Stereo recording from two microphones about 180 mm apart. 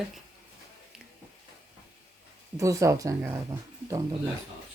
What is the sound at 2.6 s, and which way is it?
Speech, 20° right (ahead or behind).